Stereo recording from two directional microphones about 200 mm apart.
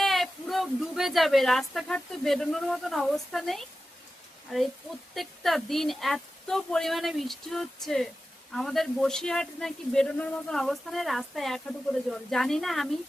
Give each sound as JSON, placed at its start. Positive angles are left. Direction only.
{"t": 0.0, "sound": "a woman's voice", "side_deg": 0}